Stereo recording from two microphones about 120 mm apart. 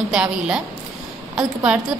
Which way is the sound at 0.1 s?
5° right (ahead or behind).